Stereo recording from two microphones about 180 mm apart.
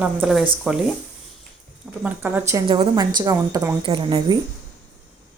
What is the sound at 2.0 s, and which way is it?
Speech, 10° right (ahead or behind).